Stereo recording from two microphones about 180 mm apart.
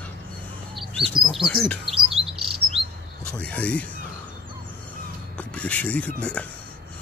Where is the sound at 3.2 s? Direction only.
5° left (ahead or behind).